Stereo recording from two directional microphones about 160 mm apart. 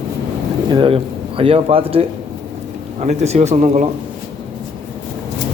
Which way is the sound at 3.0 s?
45° right (ahead or behind).